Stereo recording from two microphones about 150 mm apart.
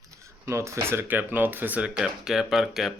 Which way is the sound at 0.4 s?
20° right (ahead or behind).